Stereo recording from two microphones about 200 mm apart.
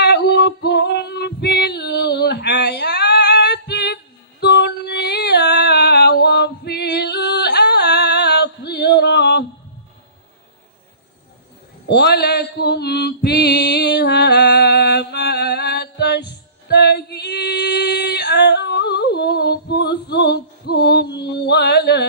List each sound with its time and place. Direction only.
0.0 s female singing: 55° left (ahead or behind)
11.9 s mantra: 55° left (ahead or behind)